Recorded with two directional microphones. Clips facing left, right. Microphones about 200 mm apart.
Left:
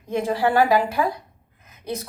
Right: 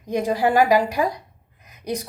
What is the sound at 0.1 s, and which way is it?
A woman's voice, 15° right (ahead or behind).